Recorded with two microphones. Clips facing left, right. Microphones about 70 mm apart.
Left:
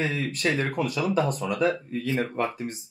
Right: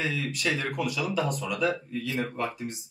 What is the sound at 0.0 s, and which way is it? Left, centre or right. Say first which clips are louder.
Speech: left 3 dB; left.